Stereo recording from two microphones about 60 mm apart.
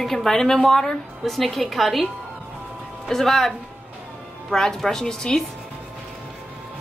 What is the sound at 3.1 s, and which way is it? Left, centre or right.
A woman's voice, centre.